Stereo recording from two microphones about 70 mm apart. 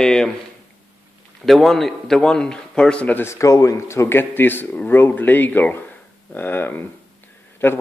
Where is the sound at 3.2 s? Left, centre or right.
Left.